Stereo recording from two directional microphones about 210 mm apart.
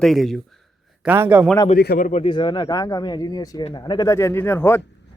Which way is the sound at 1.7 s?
45° left (ahead or behind).